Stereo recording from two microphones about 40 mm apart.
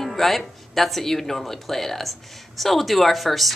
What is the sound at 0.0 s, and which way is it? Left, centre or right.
Speech, centre.